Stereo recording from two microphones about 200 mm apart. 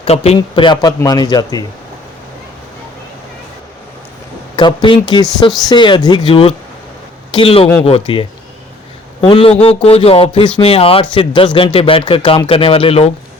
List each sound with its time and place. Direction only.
0.0 s a man's voice: 30° left (ahead or behind)
4.5 s a man's voice: 25° left (ahead or behind)